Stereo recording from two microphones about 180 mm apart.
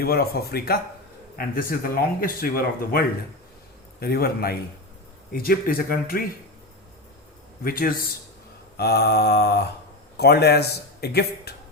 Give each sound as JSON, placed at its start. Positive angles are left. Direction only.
{"t": 0.0, "sound": "speech", "side_deg": 60}
{"t": 4.0, "sound": "speech", "side_deg": 55}
{"t": 7.6, "sound": "speech", "side_deg": 55}